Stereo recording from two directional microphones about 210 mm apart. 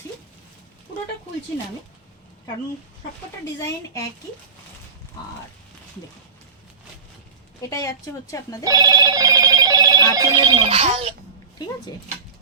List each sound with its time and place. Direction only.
7.7 s a woman's voice: 15° left (ahead or behind)
8.6 s telephone bell ringing: 15° right (ahead or behind)
10.2 s speech: 20° right (ahead or behind)